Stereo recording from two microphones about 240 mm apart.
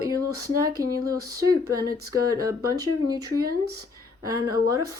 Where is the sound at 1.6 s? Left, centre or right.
Right.